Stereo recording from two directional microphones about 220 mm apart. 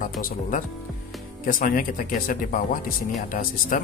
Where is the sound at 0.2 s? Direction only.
35° left (ahead or behind).